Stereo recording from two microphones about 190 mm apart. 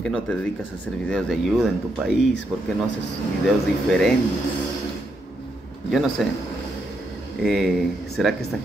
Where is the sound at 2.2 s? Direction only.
65° left (ahead or behind).